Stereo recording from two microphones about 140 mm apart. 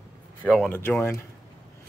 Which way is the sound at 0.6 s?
15° left (ahead or behind).